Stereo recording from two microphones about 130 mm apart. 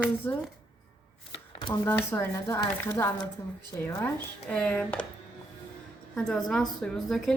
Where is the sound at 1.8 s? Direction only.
15° left (ahead or behind).